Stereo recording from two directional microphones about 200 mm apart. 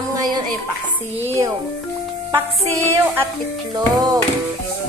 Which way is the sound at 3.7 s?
20° right (ahead or behind).